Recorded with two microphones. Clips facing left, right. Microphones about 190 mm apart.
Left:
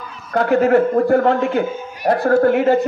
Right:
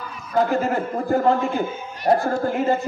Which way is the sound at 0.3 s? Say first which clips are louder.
Left 6 dB; 65° left (ahead or behind).